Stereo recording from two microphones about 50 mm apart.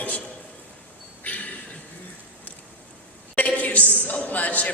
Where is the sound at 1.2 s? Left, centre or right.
Left.